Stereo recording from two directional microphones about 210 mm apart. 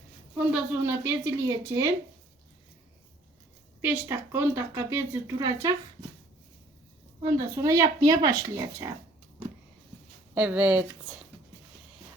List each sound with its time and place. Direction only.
0.3 s speech: 10° right (ahead or behind)
3.8 s speech: 10° right (ahead or behind)
7.2 s speech: 15° right (ahead or behind)
10.3 s speech: 5° right (ahead or behind)